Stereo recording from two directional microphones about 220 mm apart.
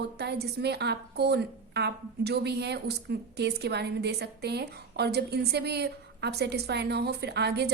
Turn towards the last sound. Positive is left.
turn(degrees=-50)  # may be behind; listen again after turning